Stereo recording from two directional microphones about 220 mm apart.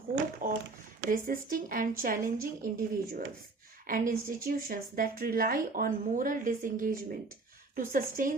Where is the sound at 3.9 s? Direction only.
40° right (ahead or behind).